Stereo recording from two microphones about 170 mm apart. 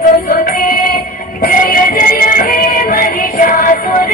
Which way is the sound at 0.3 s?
60° left (ahead or behind).